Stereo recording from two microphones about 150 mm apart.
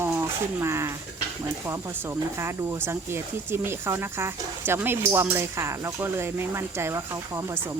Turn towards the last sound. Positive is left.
turn(degrees=-20)  # may be behind; listen again after turning